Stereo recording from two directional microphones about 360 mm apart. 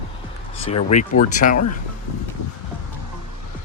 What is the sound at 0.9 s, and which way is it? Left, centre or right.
Speech, left.